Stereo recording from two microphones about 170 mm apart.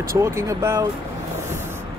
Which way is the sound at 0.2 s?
15° right (ahead or behind).